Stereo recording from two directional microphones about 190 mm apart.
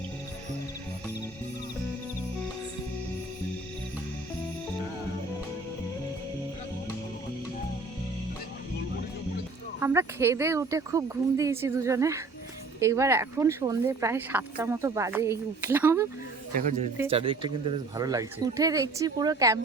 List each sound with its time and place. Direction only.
9.8 s speech: 15° right (ahead or behind)
17.1 s speech: 30° right (ahead or behind)